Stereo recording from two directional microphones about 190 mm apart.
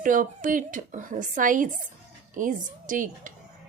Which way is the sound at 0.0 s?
45° right (ahead or behind).